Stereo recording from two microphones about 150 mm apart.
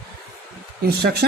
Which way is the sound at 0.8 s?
90° right.